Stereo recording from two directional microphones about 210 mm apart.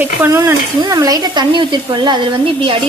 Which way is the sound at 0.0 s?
10° right (ahead or behind).